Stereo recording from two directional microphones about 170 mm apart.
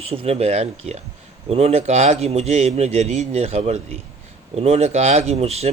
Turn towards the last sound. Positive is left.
turn(degrees=-40)  # may be behind; listen again after turning